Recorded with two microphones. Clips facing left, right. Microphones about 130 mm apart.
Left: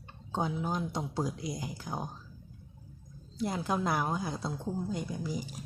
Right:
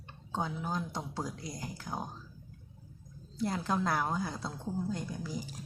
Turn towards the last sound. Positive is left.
turn(degrees=15)  # may be behind; listen again after turning